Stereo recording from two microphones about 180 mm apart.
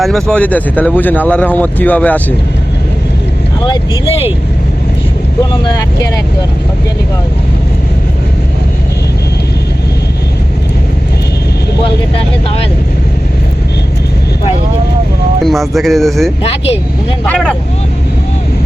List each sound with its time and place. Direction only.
0.0 s speech: centre (ahead or behind)
3.6 s speech: 30° left (ahead or behind)
5.4 s speech: 20° left (ahead or behind)
12.1 s speech: 30° left (ahead or behind)
15.4 s speech: centre (ahead or behind)
16.4 s speech: 35° left (ahead or behind)
17.2 s speech: 5° left (ahead or behind)